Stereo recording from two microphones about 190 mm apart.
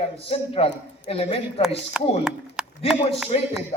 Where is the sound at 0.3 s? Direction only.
30° left (ahead or behind).